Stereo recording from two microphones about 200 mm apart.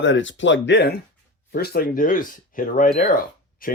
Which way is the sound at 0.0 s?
70° left (ahead or behind).